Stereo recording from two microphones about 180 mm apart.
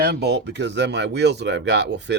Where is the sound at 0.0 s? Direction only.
65° right (ahead or behind).